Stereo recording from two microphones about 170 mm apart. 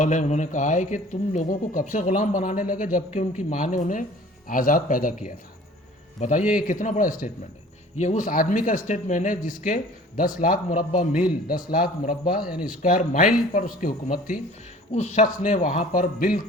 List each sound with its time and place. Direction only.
0.0 s a man's voice: 45° left (ahead or behind)
14.9 s a man's voice: 45° left (ahead or behind)